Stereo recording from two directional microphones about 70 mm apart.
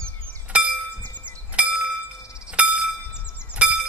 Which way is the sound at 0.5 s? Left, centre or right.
Centre.